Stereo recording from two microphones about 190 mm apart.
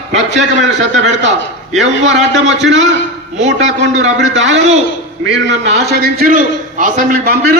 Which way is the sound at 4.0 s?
75° right (ahead or behind).